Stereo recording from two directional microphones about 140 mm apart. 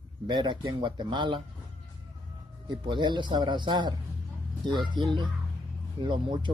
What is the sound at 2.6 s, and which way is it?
A man's voice, 35° right (ahead or behind).